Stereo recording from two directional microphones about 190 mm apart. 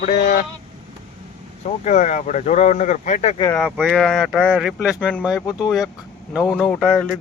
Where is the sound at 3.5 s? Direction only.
Centre (ahead or behind).